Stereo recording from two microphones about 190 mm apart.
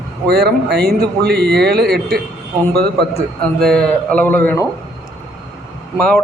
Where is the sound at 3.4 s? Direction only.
5° left (ahead or behind).